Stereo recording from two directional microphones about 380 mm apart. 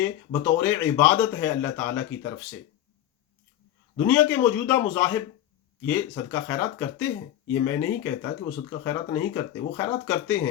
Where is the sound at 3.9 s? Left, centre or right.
Centre.